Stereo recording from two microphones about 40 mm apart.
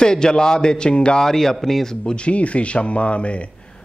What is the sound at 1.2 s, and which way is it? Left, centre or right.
Speech, centre.